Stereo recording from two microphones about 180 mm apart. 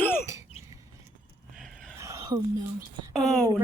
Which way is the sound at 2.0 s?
20° right (ahead or behind).